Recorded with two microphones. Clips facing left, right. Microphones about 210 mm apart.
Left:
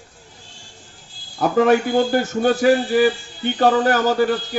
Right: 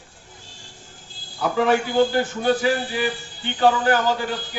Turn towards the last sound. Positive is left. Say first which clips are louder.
# left 6 dB
turn(degrees=45)  # may be behind; listen again after turning